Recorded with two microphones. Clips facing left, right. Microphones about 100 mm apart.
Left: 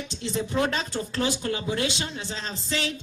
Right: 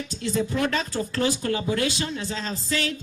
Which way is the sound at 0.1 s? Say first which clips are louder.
Right 3 dB; 25° left (ahead or behind).